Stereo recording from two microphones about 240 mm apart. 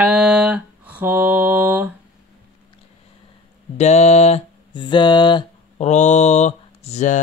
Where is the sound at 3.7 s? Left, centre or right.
Left.